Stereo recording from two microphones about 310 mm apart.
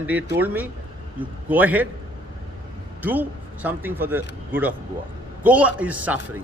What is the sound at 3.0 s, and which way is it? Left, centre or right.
A man's voice, centre.